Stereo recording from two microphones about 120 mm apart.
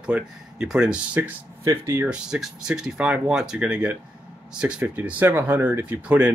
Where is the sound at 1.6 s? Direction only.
25° right (ahead or behind).